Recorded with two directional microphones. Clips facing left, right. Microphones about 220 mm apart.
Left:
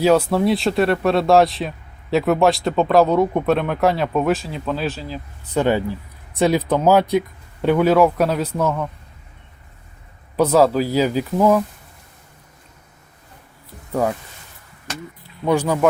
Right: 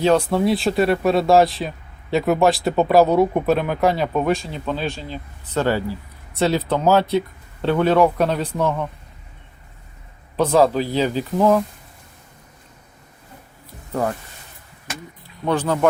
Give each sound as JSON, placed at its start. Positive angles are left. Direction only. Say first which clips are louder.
{"t": 0.0, "sound": "speech", "louder": "left 1 dB", "side_deg": 5}
{"t": 5.5, "sound": "a man's voice", "louder": "left 2 dB", "side_deg": 15}
{"t": 10.3, "sound": "a man's voice", "louder": "left 1 dB", "side_deg": 5}
{"t": 13.9, "sound": "a man's voice", "louder": "left 2 dB", "side_deg": 10}
{"t": 15.4, "sound": "a man's voice", "louder": "left 2 dB", "side_deg": 10}